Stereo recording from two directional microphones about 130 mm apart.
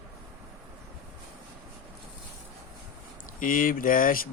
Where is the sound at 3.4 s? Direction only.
90° left.